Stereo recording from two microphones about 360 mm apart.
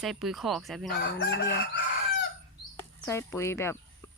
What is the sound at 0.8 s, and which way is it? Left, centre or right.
Chicken, left.